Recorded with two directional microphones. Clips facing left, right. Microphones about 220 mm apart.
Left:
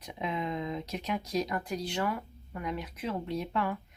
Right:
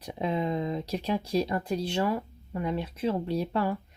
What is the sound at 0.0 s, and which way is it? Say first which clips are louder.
Speech: right 5 dB; 35° right (ahead or behind).